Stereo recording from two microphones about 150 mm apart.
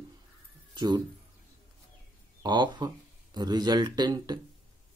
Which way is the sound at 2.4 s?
30° right (ahead or behind).